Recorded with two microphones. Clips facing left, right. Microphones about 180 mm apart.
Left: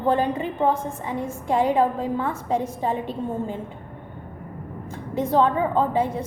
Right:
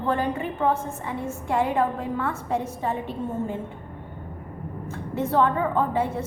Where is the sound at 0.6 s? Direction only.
20° left (ahead or behind).